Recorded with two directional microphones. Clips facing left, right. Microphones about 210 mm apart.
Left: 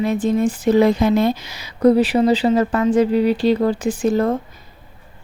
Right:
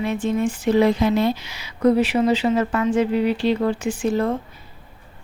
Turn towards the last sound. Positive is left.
turn(degrees=40)  # may be behind; listen again after turning